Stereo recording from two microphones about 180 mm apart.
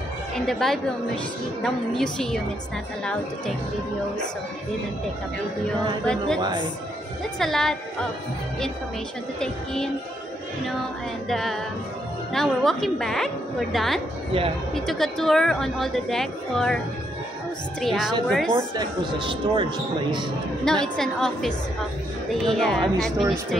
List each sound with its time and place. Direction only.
0.5 s a woman's voice: centre (ahead or behind)
6.0 s a woman's voice: 5° left (ahead or behind)
11.2 s a woman's voice: centre (ahead or behind)
18.8 s speech: 25° right (ahead or behind)
20.6 s a woman's voice: 5° left (ahead or behind)